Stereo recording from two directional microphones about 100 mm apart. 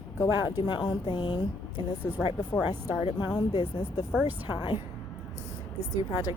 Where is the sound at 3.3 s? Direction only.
45° left (ahead or behind).